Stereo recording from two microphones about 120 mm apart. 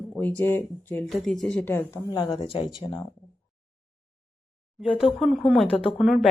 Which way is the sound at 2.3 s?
50° left (ahead or behind).